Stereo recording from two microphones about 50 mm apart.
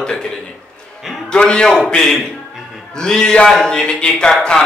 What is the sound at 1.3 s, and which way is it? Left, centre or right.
A man's voice, centre.